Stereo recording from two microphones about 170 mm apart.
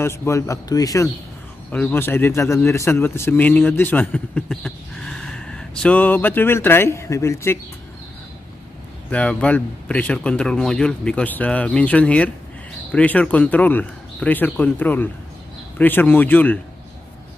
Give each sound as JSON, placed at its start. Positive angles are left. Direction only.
{"t": 0.0, "sound": "a man's voice", "side_deg": 15}
{"t": 9.1, "sound": "a man's voice", "side_deg": 5}